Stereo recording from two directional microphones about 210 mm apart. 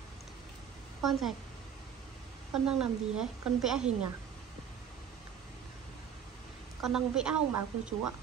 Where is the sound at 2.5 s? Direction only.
Centre (ahead or behind).